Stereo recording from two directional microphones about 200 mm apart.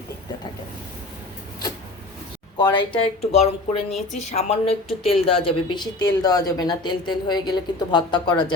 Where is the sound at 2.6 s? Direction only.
20° left (ahead or behind).